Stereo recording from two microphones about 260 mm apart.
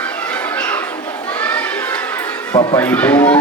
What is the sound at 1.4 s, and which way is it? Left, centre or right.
Children playing, centre.